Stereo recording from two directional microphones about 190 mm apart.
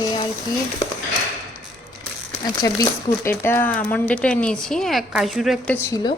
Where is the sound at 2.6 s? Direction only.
15° left (ahead or behind); by 5.8 s centre (ahead or behind).